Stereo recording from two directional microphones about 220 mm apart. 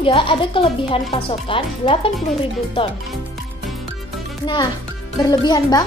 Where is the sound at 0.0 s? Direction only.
25° left (ahead or behind).